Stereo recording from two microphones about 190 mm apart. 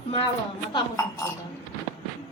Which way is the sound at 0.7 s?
20° left (ahead or behind).